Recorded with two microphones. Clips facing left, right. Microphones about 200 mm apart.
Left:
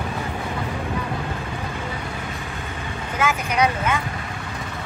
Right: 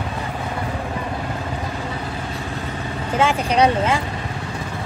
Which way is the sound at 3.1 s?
30° right (ahead or behind).